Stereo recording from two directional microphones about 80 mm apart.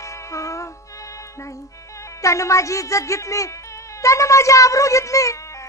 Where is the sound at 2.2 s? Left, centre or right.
Left.